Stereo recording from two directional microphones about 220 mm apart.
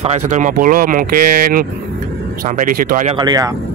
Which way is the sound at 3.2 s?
15° right (ahead or behind).